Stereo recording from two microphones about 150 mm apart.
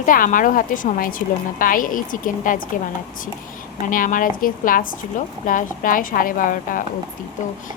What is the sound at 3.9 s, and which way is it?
A woman's voice, 65° left (ahead or behind).